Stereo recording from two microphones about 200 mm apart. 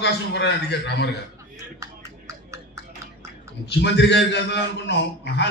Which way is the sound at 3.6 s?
60° left (ahead or behind).